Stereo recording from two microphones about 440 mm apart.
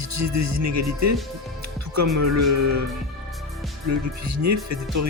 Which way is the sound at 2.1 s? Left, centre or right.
Right.